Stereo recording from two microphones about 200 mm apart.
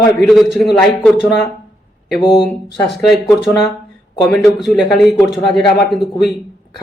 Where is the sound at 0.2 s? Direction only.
Centre (ahead or behind).